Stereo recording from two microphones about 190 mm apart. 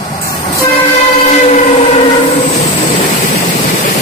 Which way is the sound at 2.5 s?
35° left (ahead or behind).